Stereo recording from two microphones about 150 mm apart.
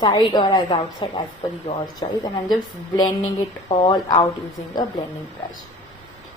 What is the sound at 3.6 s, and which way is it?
Speech, 35° left (ahead or behind).